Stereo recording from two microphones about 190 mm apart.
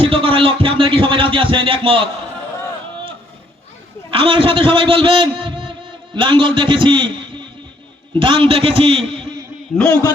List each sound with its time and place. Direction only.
0.0 s speech: 30° right (ahead or behind)
4.1 s a man's voice: 30° right (ahead or behind)
9.7 s a man's voice: 10° left (ahead or behind)